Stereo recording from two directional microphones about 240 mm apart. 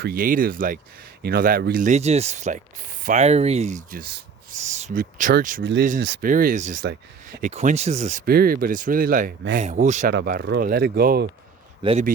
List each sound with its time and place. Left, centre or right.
0.0 s speech: right
11.8 s a man's voice: right